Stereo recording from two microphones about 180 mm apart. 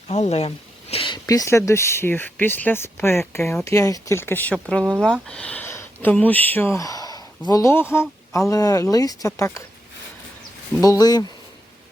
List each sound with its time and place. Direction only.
0.1 s speech: 35° left (ahead or behind); by 9.6 s 15° left (ahead or behind)
10.8 s speech: 20° left (ahead or behind)